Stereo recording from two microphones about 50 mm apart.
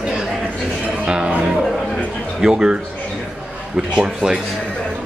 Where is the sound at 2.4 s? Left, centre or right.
Centre.